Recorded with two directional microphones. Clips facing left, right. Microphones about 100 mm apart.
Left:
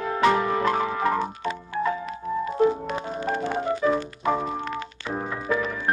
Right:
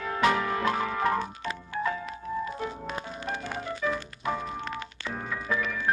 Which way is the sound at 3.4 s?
30° left (ahead or behind).